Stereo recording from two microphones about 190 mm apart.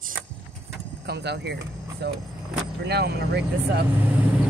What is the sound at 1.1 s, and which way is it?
Speech, 60° right (ahead or behind).